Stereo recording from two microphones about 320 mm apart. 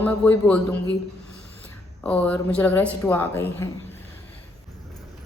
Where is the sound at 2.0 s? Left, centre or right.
Centre.